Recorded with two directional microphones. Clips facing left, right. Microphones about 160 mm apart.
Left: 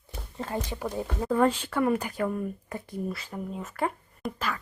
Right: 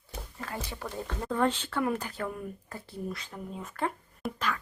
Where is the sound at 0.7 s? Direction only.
15° left (ahead or behind).